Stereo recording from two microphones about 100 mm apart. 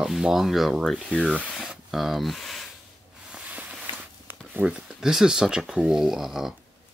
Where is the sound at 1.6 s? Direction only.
5° right (ahead or behind).